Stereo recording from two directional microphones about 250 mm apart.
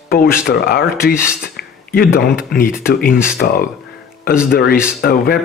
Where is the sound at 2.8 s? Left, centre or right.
Left.